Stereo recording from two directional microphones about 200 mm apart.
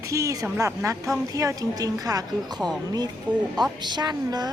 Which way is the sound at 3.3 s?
5° right (ahead or behind).